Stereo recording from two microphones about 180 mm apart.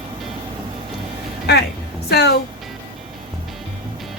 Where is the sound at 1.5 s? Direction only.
65° left (ahead or behind).